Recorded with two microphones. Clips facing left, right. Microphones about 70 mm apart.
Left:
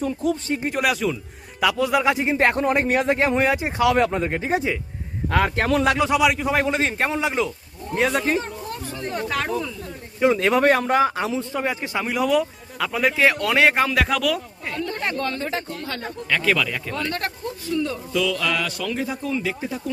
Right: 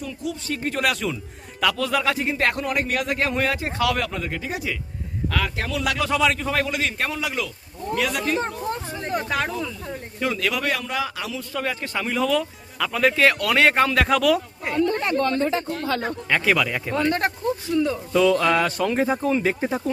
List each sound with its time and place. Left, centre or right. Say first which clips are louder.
0.0 s speech: left 7 dB; left
0.4 s speech: left 2 dB; left
0.7 s speech: left 1 dB; centre
1.6 s speech: left 3 dB; centre; by 5.6 s left
5.8 s a man's voice: left 1 dB; left
6.7 s speech: left 4 dB; left
9.3 s speech: even; centre
10.2 s speech: left 7 dB; left; by 14.4 s centre
16.3 s speech: even; centre
18.1 s speech: right 6 dB; right